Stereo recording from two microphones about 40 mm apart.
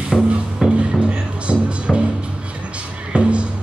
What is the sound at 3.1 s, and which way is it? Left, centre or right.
Music, right.